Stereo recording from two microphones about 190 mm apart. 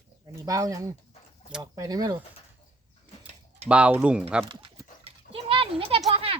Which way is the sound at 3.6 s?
5° right (ahead or behind).